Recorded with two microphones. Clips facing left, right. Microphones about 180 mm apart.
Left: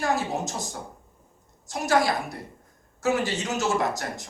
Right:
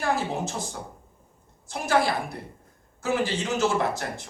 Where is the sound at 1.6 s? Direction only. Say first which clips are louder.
Left 1 dB; 40° left (ahead or behind).